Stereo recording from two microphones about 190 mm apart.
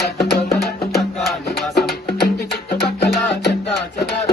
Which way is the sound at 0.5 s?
55° left (ahead or behind).